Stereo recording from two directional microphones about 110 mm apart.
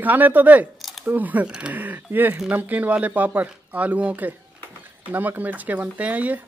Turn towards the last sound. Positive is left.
turn(degrees=-15)  # may be behind; listen again after turning